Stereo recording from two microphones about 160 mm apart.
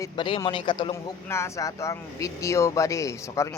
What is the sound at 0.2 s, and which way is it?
Speech, 35° left (ahead or behind).